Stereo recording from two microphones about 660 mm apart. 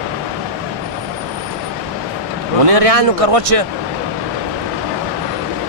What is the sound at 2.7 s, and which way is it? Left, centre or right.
Speech, right.